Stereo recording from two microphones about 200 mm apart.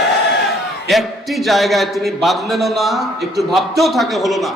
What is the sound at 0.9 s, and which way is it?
Speech, centre (ahead or behind).